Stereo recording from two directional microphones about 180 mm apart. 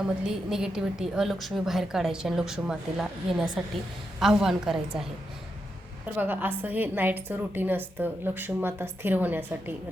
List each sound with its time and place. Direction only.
0.3 s a woman's voice: 5° right (ahead or behind)
6.1 s a woman's voice: 10° right (ahead or behind)